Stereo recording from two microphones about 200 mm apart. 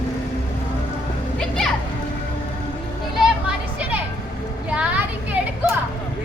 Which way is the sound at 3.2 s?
5° right (ahead or behind).